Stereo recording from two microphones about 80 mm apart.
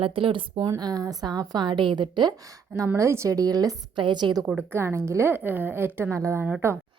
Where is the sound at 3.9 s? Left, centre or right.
Right.